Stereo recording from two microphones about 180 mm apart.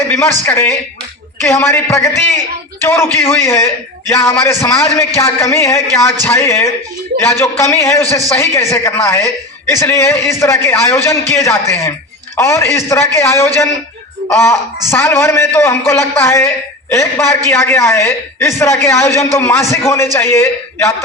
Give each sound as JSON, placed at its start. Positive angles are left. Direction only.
{"t": 0.1, "sound": "a woman's voice", "side_deg": 10}